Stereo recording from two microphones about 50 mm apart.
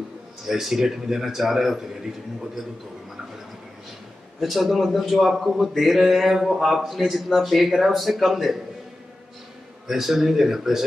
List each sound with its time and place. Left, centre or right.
0.5 s speech: centre
4.4 s speech: centre
9.8 s speech: centre